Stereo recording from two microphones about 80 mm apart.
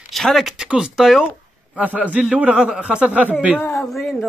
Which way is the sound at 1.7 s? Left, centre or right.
Centre.